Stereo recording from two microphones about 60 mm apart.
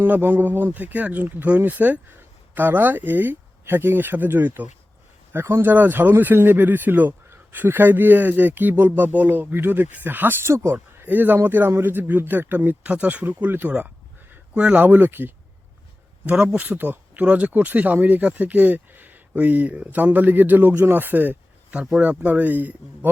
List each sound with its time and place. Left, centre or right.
0.0 s speech: right
5.3 s speech: right
5.7 s speech: right
10.4 s speech: right
11.1 s speech: right
16.2 s speech: centre
16.6 s speech: right